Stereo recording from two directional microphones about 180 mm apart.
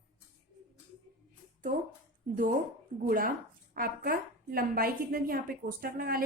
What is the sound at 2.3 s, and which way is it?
A woman's voice, 50° right (ahead or behind).